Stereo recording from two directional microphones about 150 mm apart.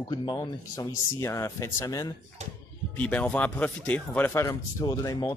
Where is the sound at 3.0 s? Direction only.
10° left (ahead or behind); by 5.3 s 25° left (ahead or behind).